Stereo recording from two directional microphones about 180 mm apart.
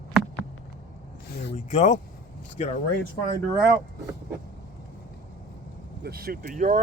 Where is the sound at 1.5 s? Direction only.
40° left (ahead or behind).